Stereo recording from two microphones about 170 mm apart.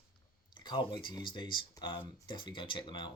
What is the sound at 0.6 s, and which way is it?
Speech, 25° left (ahead or behind).